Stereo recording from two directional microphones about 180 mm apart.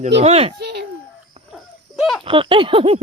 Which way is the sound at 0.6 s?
65° right (ahead or behind).